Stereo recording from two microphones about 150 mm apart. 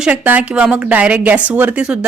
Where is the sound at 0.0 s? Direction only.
10° right (ahead or behind).